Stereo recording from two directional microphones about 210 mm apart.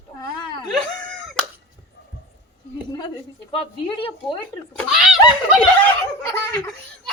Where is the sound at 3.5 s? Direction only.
25° left (ahead or behind).